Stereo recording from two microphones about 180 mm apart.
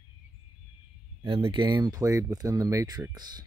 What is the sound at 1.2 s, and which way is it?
Speech, 30° right (ahead or behind).